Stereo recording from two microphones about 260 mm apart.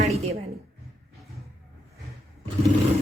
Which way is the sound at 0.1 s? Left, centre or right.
Right.